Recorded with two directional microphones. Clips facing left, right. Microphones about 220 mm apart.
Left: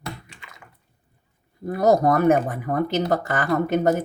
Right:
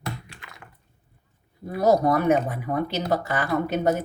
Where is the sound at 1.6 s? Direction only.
45° left (ahead or behind).